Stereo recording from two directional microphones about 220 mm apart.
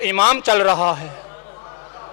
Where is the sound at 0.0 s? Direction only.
15° left (ahead or behind).